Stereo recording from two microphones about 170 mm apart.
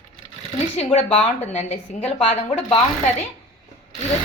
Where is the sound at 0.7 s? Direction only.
40° left (ahead or behind).